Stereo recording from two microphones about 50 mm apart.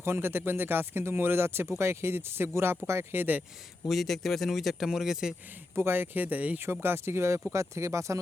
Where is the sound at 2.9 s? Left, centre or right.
Right.